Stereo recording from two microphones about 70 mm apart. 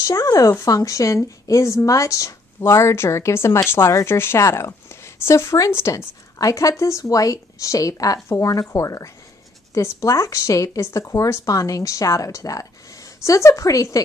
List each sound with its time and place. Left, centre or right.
0.0 s speech: left
2.6 s speech: left